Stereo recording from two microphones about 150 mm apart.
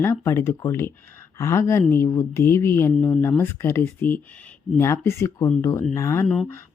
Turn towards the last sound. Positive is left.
turn(degrees=15)  # may be behind; listen again after turning